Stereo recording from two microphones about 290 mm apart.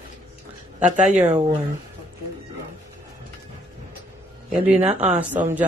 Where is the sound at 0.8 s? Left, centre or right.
Right.